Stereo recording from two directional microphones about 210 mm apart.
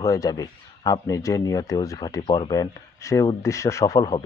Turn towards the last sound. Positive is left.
turn(degrees=20)  # may be behind; listen again after turning